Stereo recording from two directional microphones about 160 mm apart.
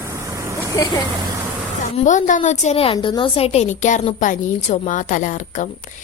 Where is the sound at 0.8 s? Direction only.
25° left (ahead or behind).